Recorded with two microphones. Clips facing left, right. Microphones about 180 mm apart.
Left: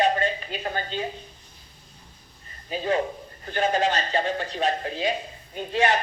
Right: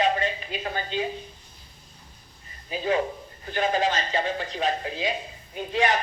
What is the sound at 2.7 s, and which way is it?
Speech, 40° left (ahead or behind).